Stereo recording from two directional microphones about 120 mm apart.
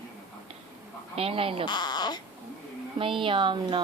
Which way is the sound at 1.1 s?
55° right (ahead or behind).